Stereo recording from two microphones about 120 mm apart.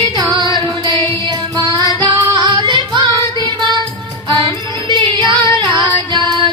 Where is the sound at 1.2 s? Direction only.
40° right (ahead or behind).